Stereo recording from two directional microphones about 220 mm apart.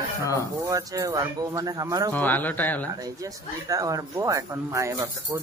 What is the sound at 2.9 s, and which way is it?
Speech, 15° right (ahead or behind).